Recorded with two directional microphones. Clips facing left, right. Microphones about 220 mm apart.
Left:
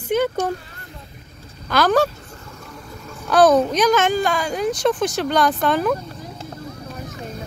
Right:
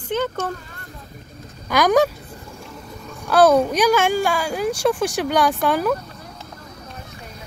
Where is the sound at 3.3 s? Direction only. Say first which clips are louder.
Even; 10° right (ahead or behind).